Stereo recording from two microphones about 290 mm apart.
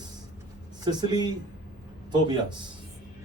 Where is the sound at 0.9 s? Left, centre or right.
Centre.